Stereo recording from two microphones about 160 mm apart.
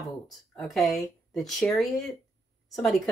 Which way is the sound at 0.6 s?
Centre (ahead or behind).